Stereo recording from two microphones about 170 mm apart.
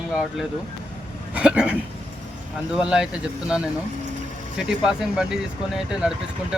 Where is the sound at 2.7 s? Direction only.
5° right (ahead or behind).